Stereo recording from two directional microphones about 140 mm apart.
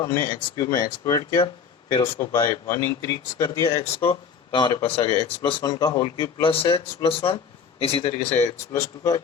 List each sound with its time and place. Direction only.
0.0 s speech: 20° left (ahead or behind)
3.8 s speech: 40° left (ahead or behind)
6.4 s a man's voice: 40° left (ahead or behind)
8.7 s speech: 25° left (ahead or behind)